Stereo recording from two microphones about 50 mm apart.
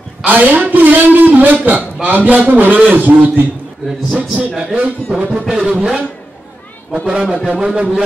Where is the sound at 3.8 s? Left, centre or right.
Centre.